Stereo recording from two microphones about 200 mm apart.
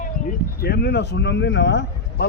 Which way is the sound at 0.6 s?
55° left (ahead or behind).